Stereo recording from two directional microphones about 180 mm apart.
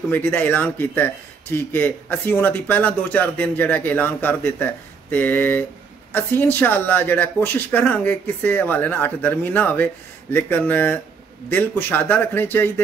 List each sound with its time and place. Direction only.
0.1 s speech: 10° left (ahead or behind)